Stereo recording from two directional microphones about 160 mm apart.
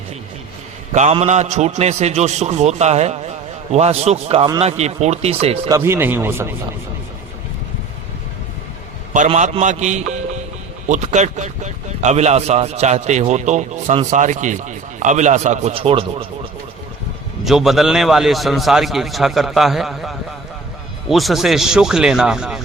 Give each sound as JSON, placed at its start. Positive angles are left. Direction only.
{"t": 0.9, "sound": "speech", "side_deg": -45}
{"t": 5.6, "sound": "speech", "side_deg": -20}
{"t": 9.1, "sound": "speech", "side_deg": -50}
{"t": 15.7, "sound": "speech", "side_deg": -35}
{"t": 17.4, "sound": "a man's voice", "side_deg": 0}